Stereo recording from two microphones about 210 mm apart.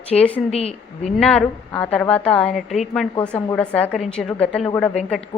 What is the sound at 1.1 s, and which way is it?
A woman's voice, 5° left (ahead or behind).